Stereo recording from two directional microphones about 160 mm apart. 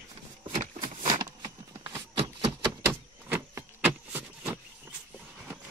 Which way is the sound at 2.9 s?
15° right (ahead or behind).